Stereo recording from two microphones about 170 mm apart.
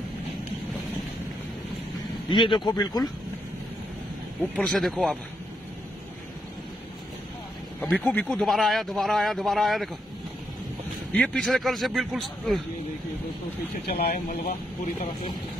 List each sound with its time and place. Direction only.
2.2 s speech: 30° left (ahead or behind)
4.4 s speech: 10° left (ahead or behind)
7.8 s speech: centre (ahead or behind)
11.1 s speech: 10° left (ahead or behind)
13.8 s speech: 65° left (ahead or behind)